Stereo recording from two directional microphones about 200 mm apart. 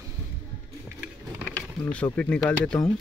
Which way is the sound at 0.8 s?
5° right (ahead or behind).